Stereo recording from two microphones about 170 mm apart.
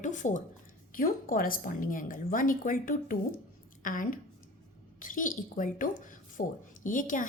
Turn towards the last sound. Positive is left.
turn(degrees=50)  # may be behind; listen again after turning